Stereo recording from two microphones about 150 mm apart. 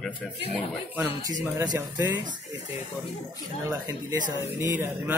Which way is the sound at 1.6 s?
25° right (ahead or behind).